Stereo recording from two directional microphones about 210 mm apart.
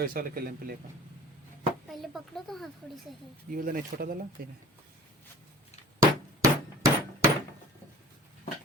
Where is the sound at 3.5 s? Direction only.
40° right (ahead or behind).